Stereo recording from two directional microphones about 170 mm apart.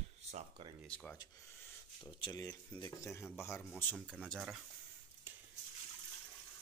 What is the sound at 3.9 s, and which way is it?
Speech, centre (ahead or behind).